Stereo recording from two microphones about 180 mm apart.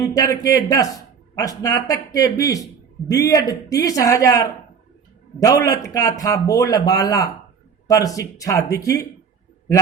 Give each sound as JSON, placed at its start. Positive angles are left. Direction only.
{"t": 0.0, "sound": "a man's voice", "side_deg": 20}